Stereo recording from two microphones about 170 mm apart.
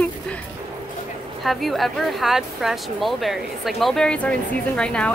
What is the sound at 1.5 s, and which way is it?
Speech, centre (ahead or behind).